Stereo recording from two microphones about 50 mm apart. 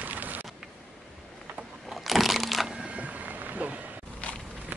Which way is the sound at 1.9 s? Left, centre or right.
Centre.